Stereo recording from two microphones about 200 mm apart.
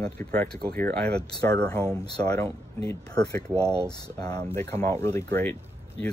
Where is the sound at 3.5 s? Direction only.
15° right (ahead or behind).